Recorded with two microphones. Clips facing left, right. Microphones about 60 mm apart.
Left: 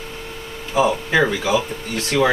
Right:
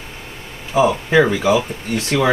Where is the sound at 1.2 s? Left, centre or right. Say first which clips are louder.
Right 4 dB; centre.